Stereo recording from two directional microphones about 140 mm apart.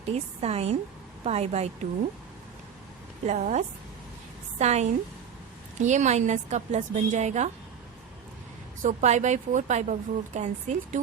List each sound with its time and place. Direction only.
0.1 s a woman's voice: 50° right (ahead or behind)
3.2 s a woman's voice: 60° right (ahead or behind)
8.8 s a woman's voice: 60° right (ahead or behind)